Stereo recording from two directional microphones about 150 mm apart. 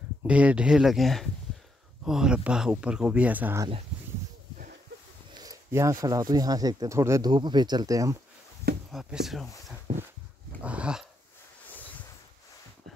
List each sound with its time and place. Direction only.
0.2 s speech: 10° right (ahead or behind)
5.3 s speech: 25° right (ahead or behind)
8.9 s speech: centre (ahead or behind)
10.6 s dog: 10° right (ahead or behind)